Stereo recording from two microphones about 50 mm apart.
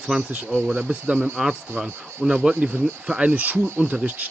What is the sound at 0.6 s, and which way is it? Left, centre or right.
Speech, right.